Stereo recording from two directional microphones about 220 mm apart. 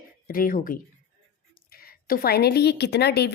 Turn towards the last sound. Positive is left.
turn(degrees=50)  # may be behind; listen again after turning